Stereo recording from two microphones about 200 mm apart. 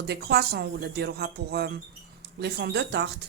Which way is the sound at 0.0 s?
55° right (ahead or behind).